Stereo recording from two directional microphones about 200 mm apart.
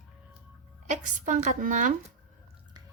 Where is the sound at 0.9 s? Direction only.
40° right (ahead or behind).